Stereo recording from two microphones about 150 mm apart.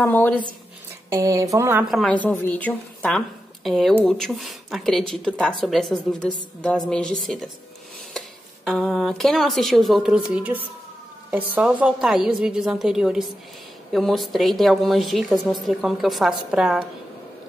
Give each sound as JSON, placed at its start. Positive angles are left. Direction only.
{"t": 0.0, "sound": "speech", "side_deg": 10}
{"t": 1.1, "sound": "a woman's voice", "side_deg": -20}
{"t": 1.9, "sound": "a woman's voice", "side_deg": 0}
{"t": 2.1, "sound": "a woman's voice", "side_deg": 10}
{"t": 8.6, "sound": "a woman's voice", "side_deg": 0}